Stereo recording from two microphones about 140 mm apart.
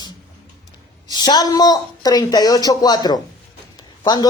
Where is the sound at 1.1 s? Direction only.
30° left (ahead or behind).